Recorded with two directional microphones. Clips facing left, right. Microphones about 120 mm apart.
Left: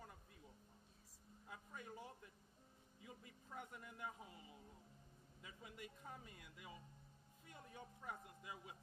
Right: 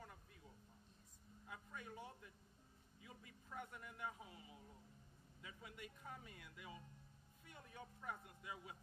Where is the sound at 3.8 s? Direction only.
30° left (ahead or behind).